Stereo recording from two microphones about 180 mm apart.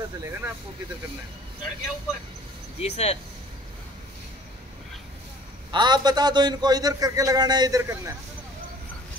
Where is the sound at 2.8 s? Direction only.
35° left (ahead or behind).